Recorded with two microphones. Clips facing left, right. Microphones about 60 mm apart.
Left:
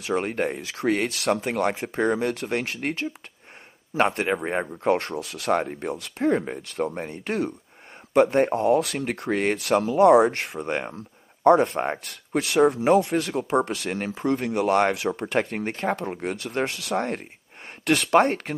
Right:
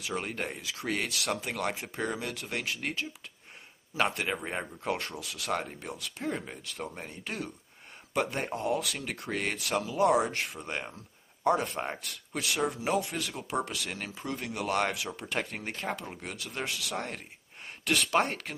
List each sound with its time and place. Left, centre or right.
0.0 s speech: left
6.6 s speech: left